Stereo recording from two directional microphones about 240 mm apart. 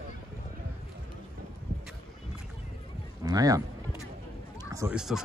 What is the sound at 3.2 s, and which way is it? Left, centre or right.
Speech, centre.